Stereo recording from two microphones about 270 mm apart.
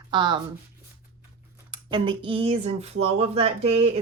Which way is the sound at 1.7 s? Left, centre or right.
Centre.